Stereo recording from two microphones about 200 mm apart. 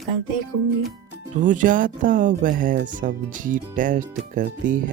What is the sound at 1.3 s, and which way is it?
Speech, 40° right (ahead or behind).